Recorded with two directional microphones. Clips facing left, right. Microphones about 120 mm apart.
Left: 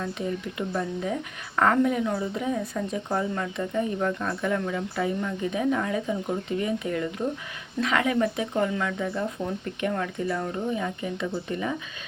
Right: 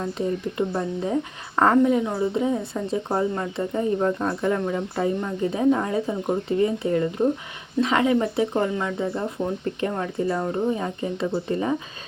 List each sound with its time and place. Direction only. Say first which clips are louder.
0.0 s a woman's voice: right 4 dB; 30° right (ahead or behind)